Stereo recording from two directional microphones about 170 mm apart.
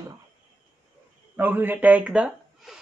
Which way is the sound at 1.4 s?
10° right (ahead or behind).